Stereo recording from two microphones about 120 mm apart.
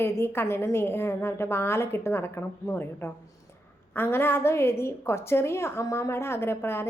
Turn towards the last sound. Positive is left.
turn(degrees=20)  # may be behind; listen again after turning